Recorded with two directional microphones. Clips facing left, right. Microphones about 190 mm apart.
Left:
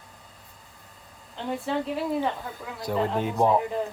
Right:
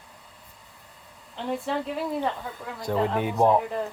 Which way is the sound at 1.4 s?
Centre (ahead or behind).